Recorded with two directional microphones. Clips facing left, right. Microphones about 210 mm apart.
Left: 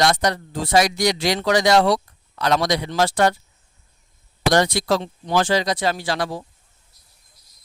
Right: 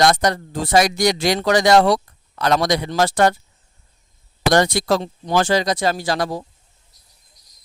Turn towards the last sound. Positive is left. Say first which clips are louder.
# right 3 dB
turn(degrees=-40)  # may be behind; listen again after turning